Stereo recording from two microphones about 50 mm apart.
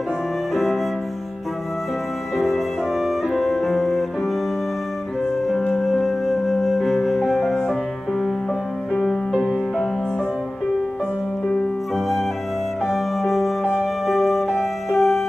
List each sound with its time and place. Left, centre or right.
2.3 s music: centre
5.7 s music: centre
9.3 s music: centre
12.8 s music: centre